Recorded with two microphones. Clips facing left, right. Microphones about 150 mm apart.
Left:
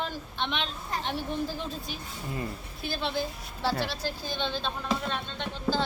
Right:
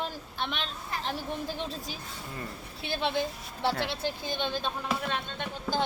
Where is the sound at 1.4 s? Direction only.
25° right (ahead or behind).